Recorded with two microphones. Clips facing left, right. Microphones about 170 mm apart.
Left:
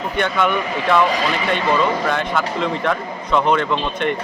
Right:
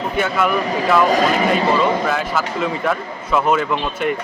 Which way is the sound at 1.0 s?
45° right (ahead or behind).